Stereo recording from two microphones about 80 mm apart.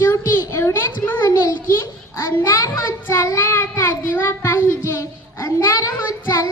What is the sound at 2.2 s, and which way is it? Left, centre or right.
Child singing, left.